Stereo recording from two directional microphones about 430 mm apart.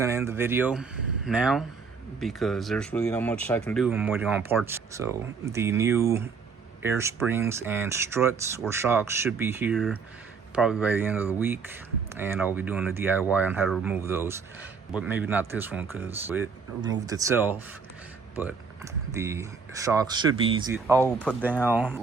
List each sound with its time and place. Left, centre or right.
0.0 s speech: centre